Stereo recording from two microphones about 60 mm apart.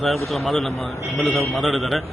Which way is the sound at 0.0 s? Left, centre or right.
Centre.